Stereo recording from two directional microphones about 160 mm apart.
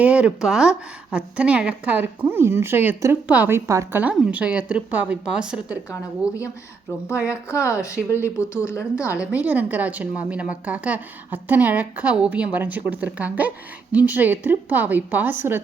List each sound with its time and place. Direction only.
0.0 s speech: 5° right (ahead or behind)
7.6 s speech: 20° left (ahead or behind)
7.9 s speech: 10° right (ahead or behind)
8.6 s a woman's voice: 20° left (ahead or behind)
9.1 s speech: 10° right (ahead or behind)